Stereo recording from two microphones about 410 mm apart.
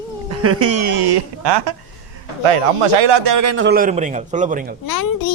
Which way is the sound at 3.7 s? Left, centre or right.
Centre.